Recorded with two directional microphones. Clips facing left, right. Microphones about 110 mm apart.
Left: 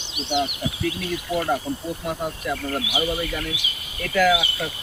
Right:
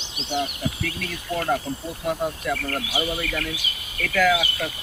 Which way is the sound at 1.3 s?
10° left (ahead or behind).